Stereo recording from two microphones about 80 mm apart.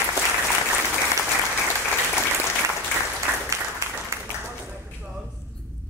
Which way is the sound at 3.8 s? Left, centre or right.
Right.